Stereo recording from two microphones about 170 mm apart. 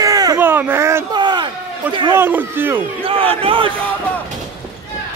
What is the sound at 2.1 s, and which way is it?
Speech, 10° right (ahead or behind).